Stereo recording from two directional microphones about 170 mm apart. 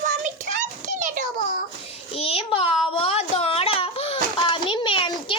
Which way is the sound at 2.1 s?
35° left (ahead or behind).